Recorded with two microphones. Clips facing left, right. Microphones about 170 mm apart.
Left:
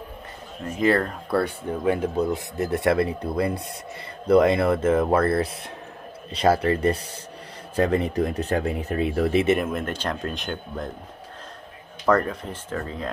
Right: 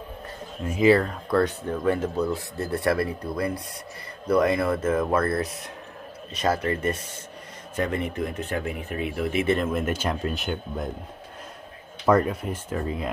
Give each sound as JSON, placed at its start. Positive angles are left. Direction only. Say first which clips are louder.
{"t": 0.7, "sound": "speech", "louder": "right 2 dB", "side_deg": -5}
{"t": 9.7, "sound": "speech", "louder": "right 2 dB", "side_deg": -5}
{"t": 12.1, "sound": "speech", "louder": "right 1 dB", "side_deg": -10}